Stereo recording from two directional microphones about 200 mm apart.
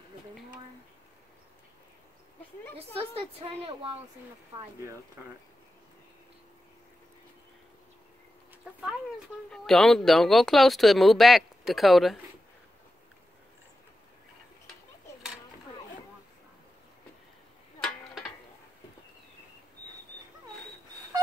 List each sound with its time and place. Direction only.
3.0 s a woman's voice: 30° right (ahead or behind)
9.5 s speech: centre (ahead or behind)
17.7 s a sound: 5° left (ahead or behind)